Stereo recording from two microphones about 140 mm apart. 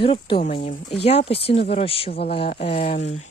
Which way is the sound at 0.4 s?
60° left (ahead or behind).